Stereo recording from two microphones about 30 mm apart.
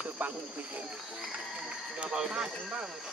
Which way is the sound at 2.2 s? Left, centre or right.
Right.